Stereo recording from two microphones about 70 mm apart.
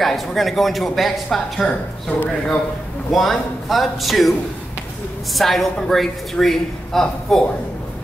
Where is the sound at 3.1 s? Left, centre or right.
Centre.